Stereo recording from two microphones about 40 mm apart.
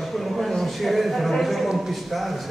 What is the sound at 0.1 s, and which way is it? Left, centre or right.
A man's voice, centre.